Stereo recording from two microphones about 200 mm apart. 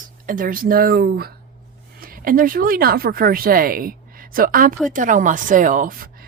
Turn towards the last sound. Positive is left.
turn(degrees=-45)  # may be behind; listen again after turning